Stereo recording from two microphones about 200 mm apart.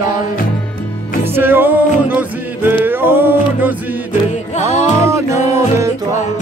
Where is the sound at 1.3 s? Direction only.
10° right (ahead or behind).